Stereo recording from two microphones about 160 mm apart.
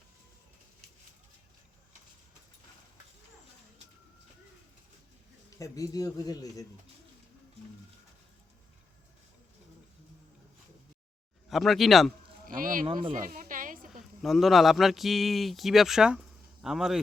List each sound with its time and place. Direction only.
5.5 s a man's voice: 20° left (ahead or behind)
11.4 s speech: centre (ahead or behind)
12.5 s speech: 60° right (ahead or behind)
12.8 s speech: 30° right (ahead or behind)
13.1 s a sound: 60° right (ahead or behind)
14.2 s speech: centre (ahead or behind)